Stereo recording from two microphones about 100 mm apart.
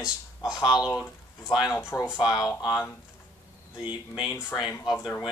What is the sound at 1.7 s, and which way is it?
Speech, 25° left (ahead or behind).